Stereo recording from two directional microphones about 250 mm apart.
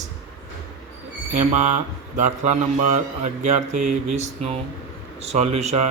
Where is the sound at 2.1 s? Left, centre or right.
Right.